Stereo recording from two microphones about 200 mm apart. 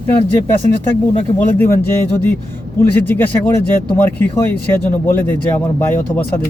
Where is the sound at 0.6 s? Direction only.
35° right (ahead or behind).